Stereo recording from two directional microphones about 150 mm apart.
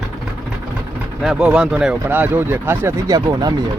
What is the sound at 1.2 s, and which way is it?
Speech, 5° right (ahead or behind).